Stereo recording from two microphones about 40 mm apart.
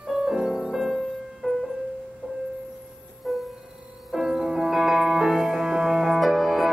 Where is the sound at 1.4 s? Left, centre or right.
Right.